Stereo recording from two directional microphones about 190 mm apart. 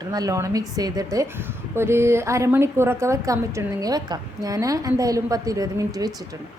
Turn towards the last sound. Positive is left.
turn(degrees=-20)  # may be behind; listen again after turning